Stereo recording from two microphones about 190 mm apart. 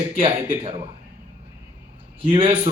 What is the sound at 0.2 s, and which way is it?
Speech, 30° right (ahead or behind).